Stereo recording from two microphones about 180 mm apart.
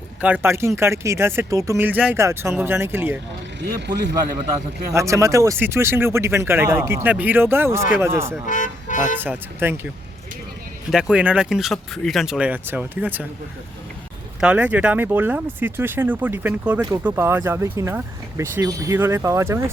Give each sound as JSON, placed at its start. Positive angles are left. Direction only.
{"t": 0.2, "sound": "speech", "side_deg": -5}
{"t": 3.6, "sound": "speech", "side_deg": -70}
{"t": 4.9, "sound": "speech", "side_deg": -15}
{"t": 8.4, "sound": "speech", "side_deg": 45}
{"t": 9.1, "sound": "speech", "side_deg": -10}
{"t": 10.9, "sound": "speech", "side_deg": -5}
{"t": 14.4, "sound": "speech", "side_deg": -5}